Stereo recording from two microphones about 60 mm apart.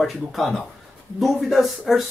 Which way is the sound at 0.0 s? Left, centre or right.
Centre.